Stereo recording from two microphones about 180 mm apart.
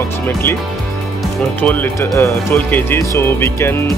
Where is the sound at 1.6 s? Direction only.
10° left (ahead or behind).